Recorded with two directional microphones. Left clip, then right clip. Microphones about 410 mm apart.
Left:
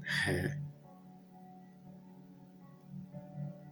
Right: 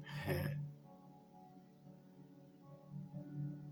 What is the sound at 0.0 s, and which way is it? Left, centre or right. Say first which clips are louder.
Music: left 10 dB; right.